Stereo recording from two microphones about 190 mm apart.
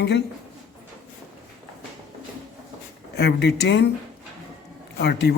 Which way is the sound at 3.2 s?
60° left (ahead or behind).